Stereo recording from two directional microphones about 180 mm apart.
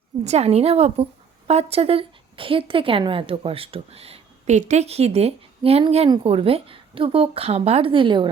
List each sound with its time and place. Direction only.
0.3 s a woman's voice: 35° right (ahead or behind)